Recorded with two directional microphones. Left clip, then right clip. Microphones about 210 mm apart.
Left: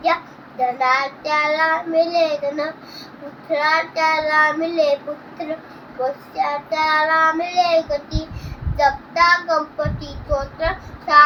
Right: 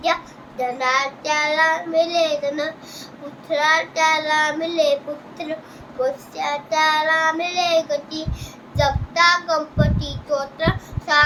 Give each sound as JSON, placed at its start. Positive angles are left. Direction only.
{"t": 0.8, "sound": "child singing", "side_deg": -15}
{"t": 6.0, "sound": "child singing", "side_deg": -15}